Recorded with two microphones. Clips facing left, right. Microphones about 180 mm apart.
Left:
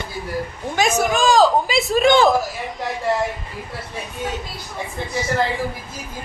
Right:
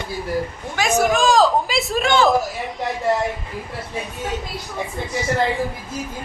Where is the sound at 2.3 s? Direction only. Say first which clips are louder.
Right 1 dB; centre (ahead or behind).